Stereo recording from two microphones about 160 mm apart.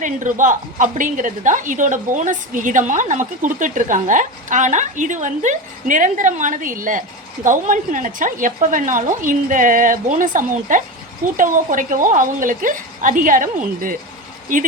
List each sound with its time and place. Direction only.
0.0 s a woman's voice: 55° right (ahead or behind)